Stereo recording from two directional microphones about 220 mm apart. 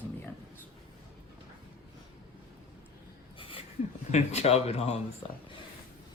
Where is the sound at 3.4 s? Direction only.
25° left (ahead or behind).